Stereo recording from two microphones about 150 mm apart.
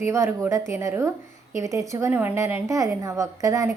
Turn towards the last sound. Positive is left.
turn(degrees=-20)  # may be behind; listen again after turning